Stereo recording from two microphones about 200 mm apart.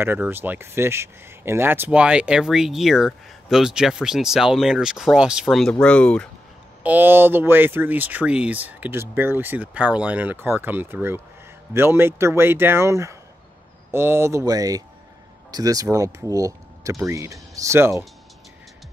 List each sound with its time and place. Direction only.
0.0 s speech: 10° right (ahead or behind); by 6.2 s 5° left (ahead or behind)
6.8 s speech: 10° right (ahead or behind)